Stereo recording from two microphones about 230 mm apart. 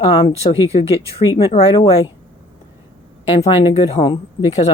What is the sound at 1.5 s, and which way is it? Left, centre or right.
Speech, left.